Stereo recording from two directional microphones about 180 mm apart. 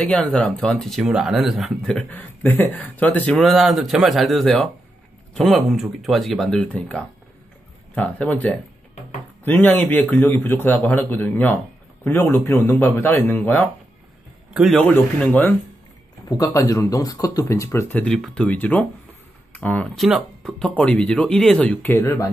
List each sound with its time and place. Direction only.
0.0 s speech: 5° left (ahead or behind)
14.5 s speech: centre (ahead or behind)
16.3 s speech: 20° left (ahead or behind)